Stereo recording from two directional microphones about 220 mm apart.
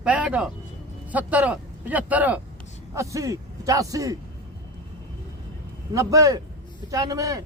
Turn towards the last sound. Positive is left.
turn(degrees=-15)  # may be behind; listen again after turning